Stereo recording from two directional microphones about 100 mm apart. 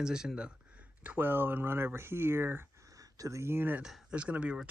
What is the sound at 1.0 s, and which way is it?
Speech, 20° right (ahead or behind).